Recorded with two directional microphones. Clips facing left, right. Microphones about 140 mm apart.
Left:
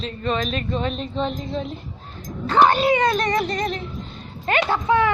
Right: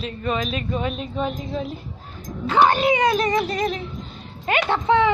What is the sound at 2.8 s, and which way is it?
Music, 15° right (ahead or behind).